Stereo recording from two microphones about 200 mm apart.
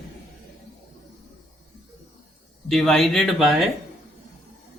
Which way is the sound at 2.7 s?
Centre (ahead or behind).